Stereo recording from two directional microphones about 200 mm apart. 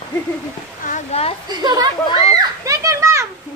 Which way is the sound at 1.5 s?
20° right (ahead or behind).